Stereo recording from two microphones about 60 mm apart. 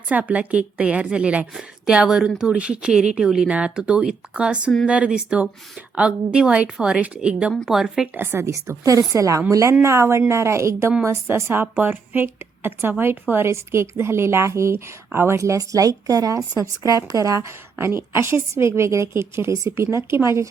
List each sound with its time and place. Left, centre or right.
0.1 s a woman's voice: right; by 8.0 s centre
8.2 s a woman's voice: right
8.4 s a woman's voice: right
9.8 s a woman's voice: right
15.4 s speech: right
17.7 s a woman's voice: right